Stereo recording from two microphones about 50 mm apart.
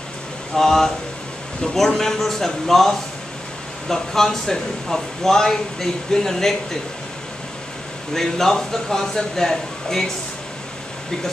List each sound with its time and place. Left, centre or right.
0.6 s speech: centre
8.1 s speech: centre